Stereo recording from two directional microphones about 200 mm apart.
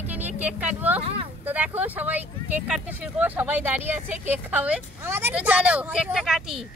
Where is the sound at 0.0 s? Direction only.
10° right (ahead or behind).